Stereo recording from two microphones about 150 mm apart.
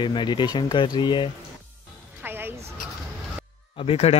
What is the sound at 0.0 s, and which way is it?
Speech, 30° left (ahead or behind).